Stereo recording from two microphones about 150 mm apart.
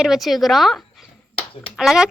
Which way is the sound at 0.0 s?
Centre (ahead or behind).